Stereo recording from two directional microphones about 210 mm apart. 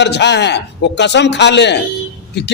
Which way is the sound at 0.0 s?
55° left (ahead or behind).